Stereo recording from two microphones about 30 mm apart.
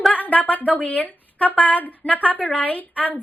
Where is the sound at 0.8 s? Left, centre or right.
Left.